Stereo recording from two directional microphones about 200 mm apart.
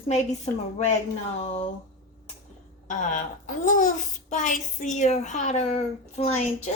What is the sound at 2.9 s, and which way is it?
Speech, 40° left (ahead or behind).